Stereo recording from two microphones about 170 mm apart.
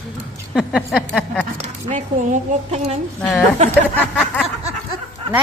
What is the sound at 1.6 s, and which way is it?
Speech, 45° right (ahead or behind).